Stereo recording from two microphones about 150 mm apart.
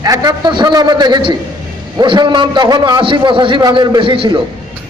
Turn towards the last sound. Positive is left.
turn(degrees=-35)  # may be behind; listen again after turning